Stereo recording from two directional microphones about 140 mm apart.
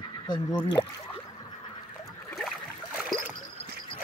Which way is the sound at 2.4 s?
5° right (ahead or behind).